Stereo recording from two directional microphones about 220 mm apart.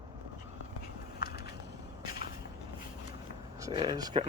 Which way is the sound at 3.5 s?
15° right (ahead or behind).